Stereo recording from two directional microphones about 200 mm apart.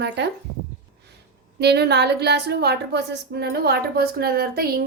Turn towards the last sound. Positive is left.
turn(degrees=-50)  # may be behind; listen again after turning